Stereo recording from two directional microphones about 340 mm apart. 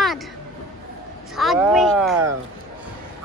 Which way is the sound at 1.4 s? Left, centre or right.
Centre.